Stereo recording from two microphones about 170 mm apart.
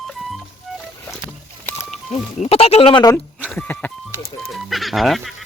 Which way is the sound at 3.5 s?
10° left (ahead or behind).